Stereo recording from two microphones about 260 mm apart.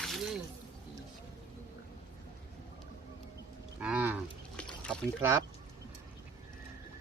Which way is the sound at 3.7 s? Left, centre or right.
Centre.